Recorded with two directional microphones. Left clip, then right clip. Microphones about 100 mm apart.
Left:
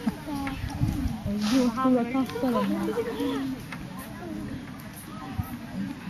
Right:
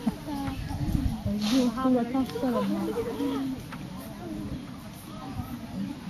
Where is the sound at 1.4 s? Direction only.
50° right (ahead or behind).